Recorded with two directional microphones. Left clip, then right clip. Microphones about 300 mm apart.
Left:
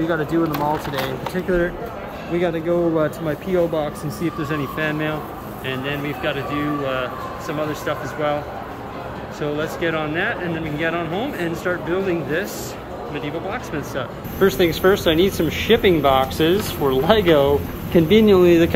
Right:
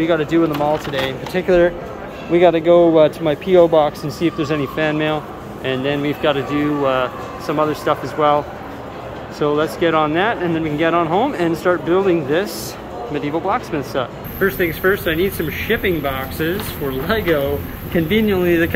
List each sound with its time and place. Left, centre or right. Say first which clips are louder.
0.1 s a man's voice: right 4 dB; centre
9.4 s a man's voice: right 7 dB; centre
14.4 s speech: left 1 dB; centre